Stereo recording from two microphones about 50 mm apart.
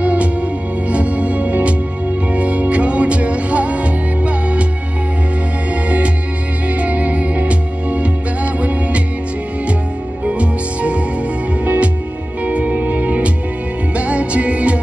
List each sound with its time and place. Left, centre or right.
0.0 s music: right
5.9 s music: right
10.2 s music: right